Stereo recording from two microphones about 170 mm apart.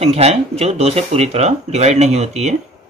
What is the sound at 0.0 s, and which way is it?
Speech, 40° right (ahead or behind).